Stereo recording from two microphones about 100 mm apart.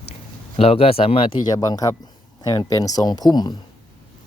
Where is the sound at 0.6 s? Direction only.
70° left (ahead or behind).